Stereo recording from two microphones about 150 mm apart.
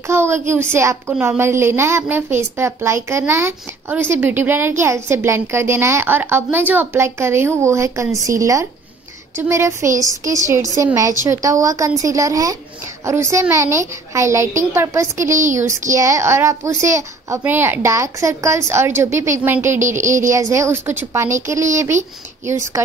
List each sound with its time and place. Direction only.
0.1 s a child's voice: 15° right (ahead or behind)
15.3 s speech: 55° right (ahead or behind)
15.9 s a child's voice: 20° right (ahead or behind)